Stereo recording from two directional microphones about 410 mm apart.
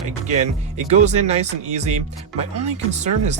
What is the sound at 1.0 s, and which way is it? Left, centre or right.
Speech, centre.